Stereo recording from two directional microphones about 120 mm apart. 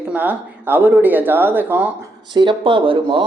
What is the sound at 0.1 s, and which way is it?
Speech, 15° right (ahead or behind).